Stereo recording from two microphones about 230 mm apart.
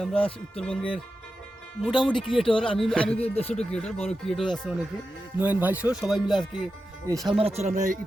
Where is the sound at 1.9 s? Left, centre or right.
Left.